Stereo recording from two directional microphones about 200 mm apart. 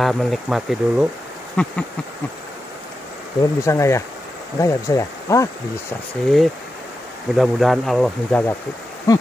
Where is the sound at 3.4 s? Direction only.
15° left (ahead or behind).